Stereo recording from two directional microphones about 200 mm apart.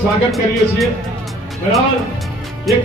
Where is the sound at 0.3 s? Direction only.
Centre (ahead or behind).